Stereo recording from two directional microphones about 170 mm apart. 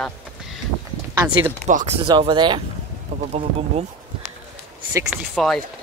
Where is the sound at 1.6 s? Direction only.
45° right (ahead or behind); by 2.6 s 25° right (ahead or behind).